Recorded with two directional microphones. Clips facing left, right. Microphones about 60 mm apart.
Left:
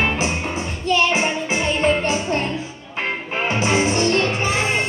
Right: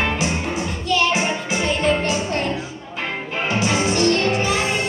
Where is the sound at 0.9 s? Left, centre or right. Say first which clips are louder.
Left 1 dB; left.